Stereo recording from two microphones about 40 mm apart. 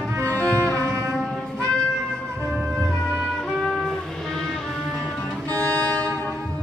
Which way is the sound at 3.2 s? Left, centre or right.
Centre.